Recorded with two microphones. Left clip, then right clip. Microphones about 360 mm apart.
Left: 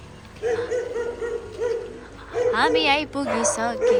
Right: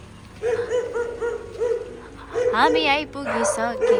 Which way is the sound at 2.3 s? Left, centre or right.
Centre.